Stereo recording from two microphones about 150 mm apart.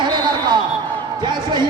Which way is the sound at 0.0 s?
30° right (ahead or behind).